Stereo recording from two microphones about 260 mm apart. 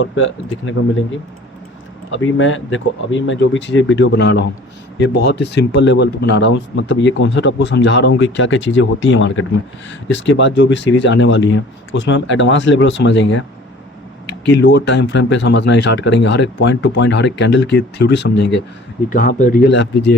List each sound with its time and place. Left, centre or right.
0.0 s speech: left
2.0 s speech: left
19.1 s speech: left